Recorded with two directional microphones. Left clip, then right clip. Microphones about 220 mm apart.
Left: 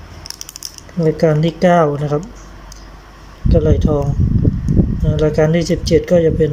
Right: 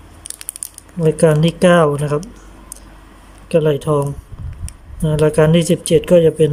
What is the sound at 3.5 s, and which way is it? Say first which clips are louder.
Speech: right 1 dB; 10° right (ahead or behind).